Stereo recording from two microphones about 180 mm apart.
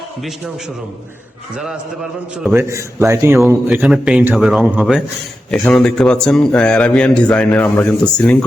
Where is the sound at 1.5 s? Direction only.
5° right (ahead or behind).